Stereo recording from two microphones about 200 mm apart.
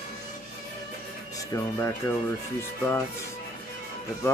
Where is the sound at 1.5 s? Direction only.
15° left (ahead or behind).